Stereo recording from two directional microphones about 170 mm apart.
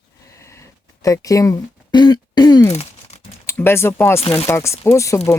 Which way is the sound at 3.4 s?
15° left (ahead or behind).